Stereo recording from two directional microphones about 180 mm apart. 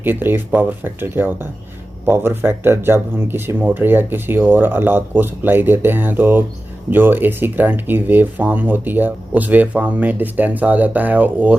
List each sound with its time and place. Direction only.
0.0 s speech: 10° right (ahead or behind)